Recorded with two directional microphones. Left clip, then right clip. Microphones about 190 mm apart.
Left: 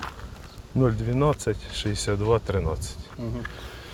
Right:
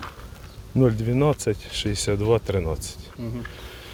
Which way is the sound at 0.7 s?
60° right (ahead or behind).